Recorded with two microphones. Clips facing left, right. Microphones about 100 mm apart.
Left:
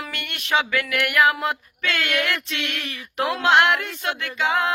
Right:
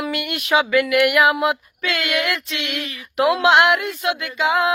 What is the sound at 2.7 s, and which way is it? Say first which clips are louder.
Speech: right 4 dB; 45° left (ahead or behind).